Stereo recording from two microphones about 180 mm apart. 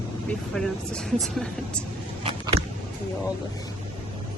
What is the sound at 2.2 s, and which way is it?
Biting, 30° right (ahead or behind).